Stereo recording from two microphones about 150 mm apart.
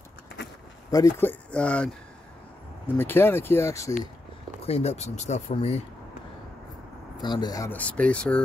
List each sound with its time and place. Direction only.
0.8 s speech: 20° left (ahead or behind)
3.0 s speech: 15° left (ahead or behind)
4.6 s speech: 45° left (ahead or behind)
7.2 s speech: 30° left (ahead or behind)
7.7 s speech: 10° left (ahead or behind)